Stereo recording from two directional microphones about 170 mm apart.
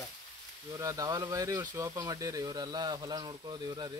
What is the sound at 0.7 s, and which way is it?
Speech, 20° right (ahead or behind).